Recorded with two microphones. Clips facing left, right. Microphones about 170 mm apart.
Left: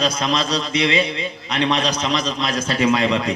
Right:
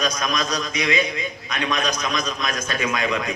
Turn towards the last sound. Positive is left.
turn(degrees=30)  # may be behind; listen again after turning